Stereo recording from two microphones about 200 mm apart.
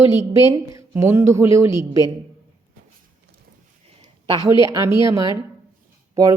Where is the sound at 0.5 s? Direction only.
15° right (ahead or behind).